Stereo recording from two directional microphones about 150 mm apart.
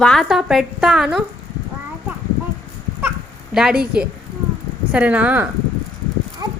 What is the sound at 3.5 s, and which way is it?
A woman's voice, 5° right (ahead or behind).